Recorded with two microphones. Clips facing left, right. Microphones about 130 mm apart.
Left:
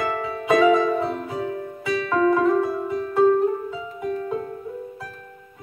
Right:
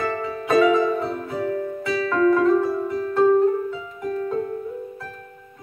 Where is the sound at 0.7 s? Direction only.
15° left (ahead or behind).